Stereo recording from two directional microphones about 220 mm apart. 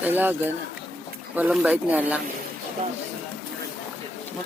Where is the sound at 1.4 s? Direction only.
5° right (ahead or behind).